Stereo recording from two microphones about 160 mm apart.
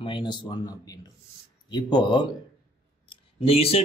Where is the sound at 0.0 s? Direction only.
30° left (ahead or behind).